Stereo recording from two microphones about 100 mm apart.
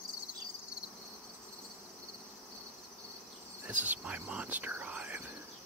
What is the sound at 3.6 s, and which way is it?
Speech, 15° right (ahead or behind).